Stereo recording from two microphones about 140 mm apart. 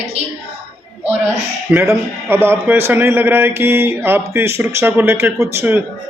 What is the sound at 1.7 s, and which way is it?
A man's voice, 15° right (ahead or behind).